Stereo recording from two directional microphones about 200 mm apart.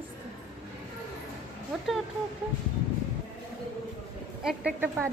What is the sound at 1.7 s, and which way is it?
Speech, centre (ahead or behind).